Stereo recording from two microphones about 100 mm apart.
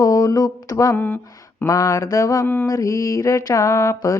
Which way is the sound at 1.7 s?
35° left (ahead or behind).